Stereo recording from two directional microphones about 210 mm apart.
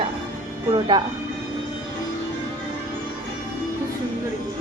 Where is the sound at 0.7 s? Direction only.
20° right (ahead or behind).